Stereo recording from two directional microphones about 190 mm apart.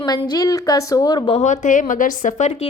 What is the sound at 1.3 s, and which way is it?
Speech, 40° left (ahead or behind).